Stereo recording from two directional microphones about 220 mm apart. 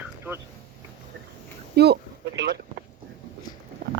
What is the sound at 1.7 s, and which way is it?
Speech, 50° right (ahead or behind).